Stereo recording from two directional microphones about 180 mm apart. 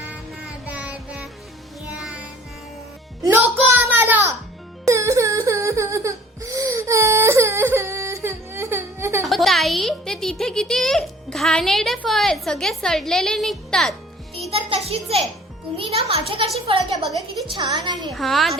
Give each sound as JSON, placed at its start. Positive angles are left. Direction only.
{"t": 0.0, "sound": "music", "side_deg": -10}
{"t": 3.2, "sound": "music", "side_deg": -15}
{"t": 4.9, "sound": "a sound", "side_deg": -15}
{"t": 9.2, "sound": "a woman's voice", "side_deg": 0}
{"t": 14.5, "sound": "music", "side_deg": -35}
{"t": 15.8, "sound": "a child's voice", "side_deg": -30}
{"t": 18.1, "sound": "a woman's voice", "side_deg": 0}